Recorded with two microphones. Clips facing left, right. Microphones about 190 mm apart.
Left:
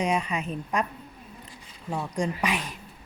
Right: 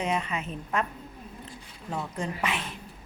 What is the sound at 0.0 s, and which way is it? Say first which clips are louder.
Speech: left 3 dB; 15° left (ahead or behind).